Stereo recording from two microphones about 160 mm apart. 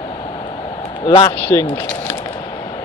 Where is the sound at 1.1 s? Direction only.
30° left (ahead or behind).